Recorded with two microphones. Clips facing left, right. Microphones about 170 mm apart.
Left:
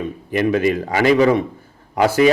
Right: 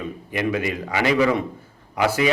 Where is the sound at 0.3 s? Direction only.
35° left (ahead or behind).